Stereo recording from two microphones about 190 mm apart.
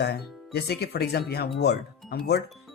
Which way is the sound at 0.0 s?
60° left (ahead or behind).